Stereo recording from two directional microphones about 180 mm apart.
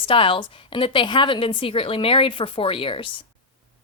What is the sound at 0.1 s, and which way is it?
A woman's voice, 30° left (ahead or behind).